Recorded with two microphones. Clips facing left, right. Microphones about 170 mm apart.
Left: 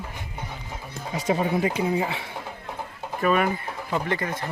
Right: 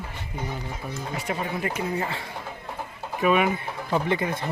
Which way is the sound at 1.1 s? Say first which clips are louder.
Left 8 dB; 20° left (ahead or behind).